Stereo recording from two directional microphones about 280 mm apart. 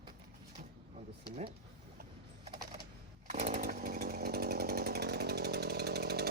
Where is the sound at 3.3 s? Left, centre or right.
Right.